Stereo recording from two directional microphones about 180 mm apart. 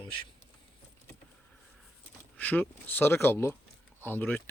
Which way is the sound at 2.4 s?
10° left (ahead or behind).